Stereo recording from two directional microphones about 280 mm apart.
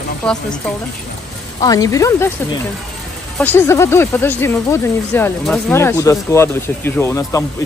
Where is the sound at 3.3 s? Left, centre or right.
Centre.